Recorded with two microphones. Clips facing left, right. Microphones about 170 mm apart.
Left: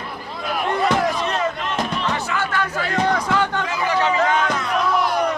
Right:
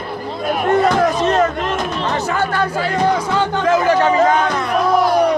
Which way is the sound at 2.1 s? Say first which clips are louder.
Right 5 dB; 40° right (ahead or behind).